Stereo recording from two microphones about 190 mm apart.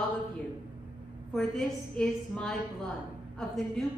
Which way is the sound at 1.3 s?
5° left (ahead or behind).